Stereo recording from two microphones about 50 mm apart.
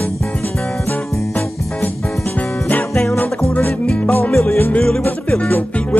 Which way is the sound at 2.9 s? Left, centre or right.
Centre.